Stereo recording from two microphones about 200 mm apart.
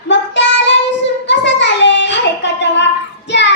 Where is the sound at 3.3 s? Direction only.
60° left (ahead or behind).